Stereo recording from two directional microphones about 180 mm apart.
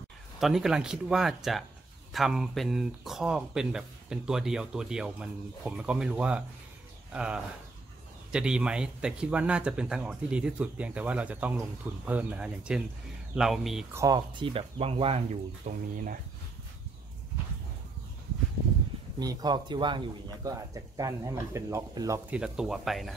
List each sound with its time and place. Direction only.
0.4 s speech: centre (ahead or behind)
13.9 s speech: 20° right (ahead or behind); by 16.2 s 45° right (ahead or behind)
19.1 s speech: 20° right (ahead or behind)
22.3 s speech: 5° right (ahead or behind)